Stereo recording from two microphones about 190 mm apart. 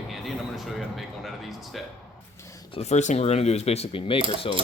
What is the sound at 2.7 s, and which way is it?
Speech, 35° left (ahead or behind).